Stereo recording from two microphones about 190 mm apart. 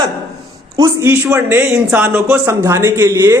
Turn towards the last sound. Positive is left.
turn(degrees=-15)  # may be behind; listen again after turning